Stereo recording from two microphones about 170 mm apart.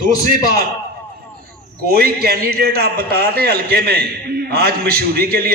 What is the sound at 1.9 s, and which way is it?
A man's voice, 65° right (ahead or behind).